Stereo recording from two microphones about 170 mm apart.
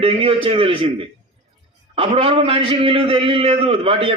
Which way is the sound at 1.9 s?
30° right (ahead or behind).